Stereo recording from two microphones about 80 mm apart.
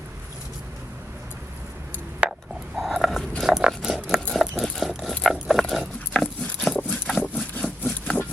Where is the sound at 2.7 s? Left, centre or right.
Centre.